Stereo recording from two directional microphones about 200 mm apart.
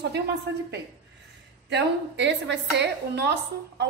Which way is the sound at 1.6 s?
60° right (ahead or behind).